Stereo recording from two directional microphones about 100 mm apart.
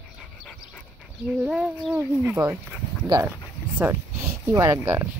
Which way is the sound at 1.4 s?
10° right (ahead or behind).